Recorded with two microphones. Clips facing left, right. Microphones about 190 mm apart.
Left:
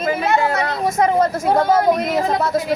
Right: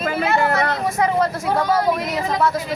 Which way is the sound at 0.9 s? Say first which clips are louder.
Left 5 dB; 45° left (ahead or behind).